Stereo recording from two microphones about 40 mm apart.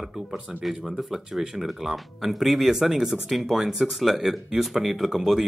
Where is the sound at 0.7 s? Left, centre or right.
Centre.